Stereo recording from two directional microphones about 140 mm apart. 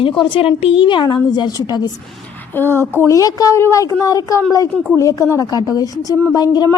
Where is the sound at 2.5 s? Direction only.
15° left (ahead or behind).